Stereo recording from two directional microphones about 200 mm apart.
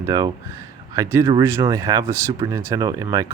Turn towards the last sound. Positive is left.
turn(degrees=-20)  # may be behind; listen again after turning